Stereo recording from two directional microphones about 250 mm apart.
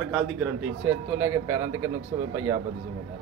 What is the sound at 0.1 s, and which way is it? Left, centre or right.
A man's voice, centre.